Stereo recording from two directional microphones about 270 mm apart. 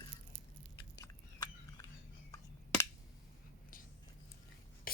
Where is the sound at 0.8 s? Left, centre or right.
Centre.